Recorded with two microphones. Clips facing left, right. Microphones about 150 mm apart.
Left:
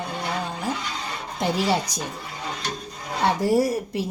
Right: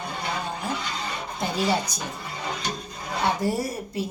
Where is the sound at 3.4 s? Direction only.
90° left.